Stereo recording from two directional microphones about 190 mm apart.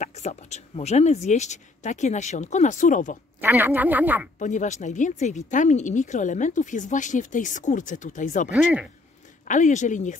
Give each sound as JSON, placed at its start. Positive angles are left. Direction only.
{"t": 0.0, "sound": "speech", "side_deg": 35}
{"t": 3.3, "sound": "speech", "side_deg": -10}
{"t": 4.4, "sound": "speech", "side_deg": 40}
{"t": 9.5, "sound": "speech", "side_deg": 40}